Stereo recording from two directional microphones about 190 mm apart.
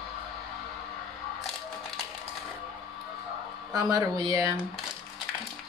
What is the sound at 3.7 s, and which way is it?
Speech, 20° right (ahead or behind).